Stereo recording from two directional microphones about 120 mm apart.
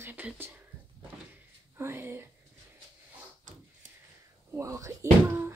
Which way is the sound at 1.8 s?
20° right (ahead or behind).